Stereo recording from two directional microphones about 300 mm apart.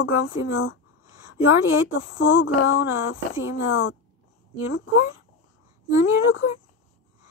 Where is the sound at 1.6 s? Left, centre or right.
Left.